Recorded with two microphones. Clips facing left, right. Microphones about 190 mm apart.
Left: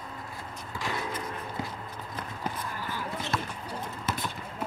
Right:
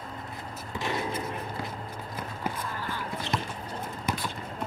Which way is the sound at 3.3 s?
15° right (ahead or behind).